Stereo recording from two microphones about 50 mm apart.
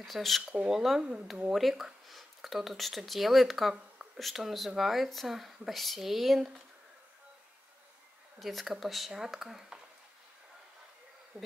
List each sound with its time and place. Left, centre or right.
0.0 s speech: centre
8.4 s speech: centre
11.3 s bee: centre